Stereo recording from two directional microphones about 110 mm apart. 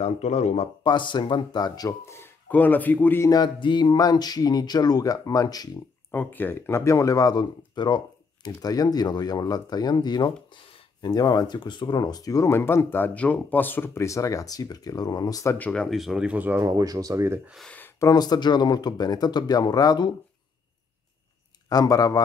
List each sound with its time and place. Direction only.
0.0 s speech: 90° left
0.8 s speech: 45° left (ahead or behind); by 3.3 s 15° left (ahead or behind)
3.3 s speech: 40° left (ahead or behind)
6.1 s speech: 15° left (ahead or behind); by 15.5 s 35° left (ahead or behind)
15.5 s speech: 10° left (ahead or behind); by 16.6 s 15° right (ahead or behind)
16.6 s speech: 30° right (ahead or behind)
18.0 s speech: 35° left (ahead or behind)
21.6 s speech: 35° left (ahead or behind)